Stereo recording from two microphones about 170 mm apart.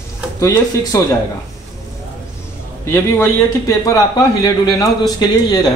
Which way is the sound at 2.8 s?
15° left (ahead or behind).